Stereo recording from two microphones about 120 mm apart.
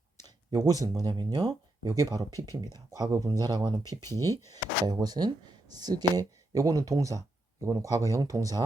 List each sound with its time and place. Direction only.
0.2 s speech: 35° right (ahead or behind)